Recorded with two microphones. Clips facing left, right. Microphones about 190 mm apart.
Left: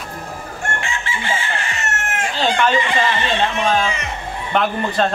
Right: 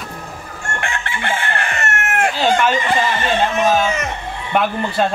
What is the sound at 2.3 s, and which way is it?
Speech, 5° right (ahead or behind).